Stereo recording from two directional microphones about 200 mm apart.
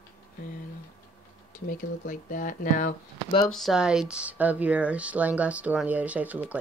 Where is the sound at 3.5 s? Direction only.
Centre (ahead or behind).